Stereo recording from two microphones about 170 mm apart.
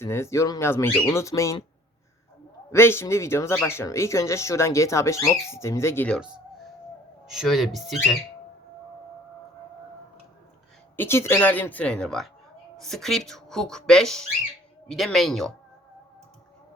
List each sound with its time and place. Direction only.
0.0 s speech: 15° left (ahead or behind)
2.7 s speech: 15° left (ahead or behind)
7.3 s speech: centre (ahead or behind)
10.9 s speech: 15° left (ahead or behind)